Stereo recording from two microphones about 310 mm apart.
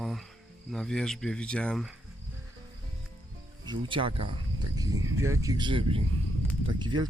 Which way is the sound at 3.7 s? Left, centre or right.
Centre.